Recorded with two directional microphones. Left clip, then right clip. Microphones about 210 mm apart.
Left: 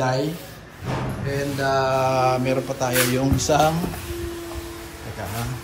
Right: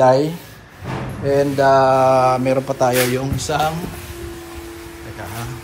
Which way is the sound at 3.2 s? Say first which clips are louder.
Left 1 dB; 20° left (ahead or behind).